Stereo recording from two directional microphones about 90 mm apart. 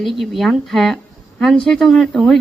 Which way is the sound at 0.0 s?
Centre (ahead or behind).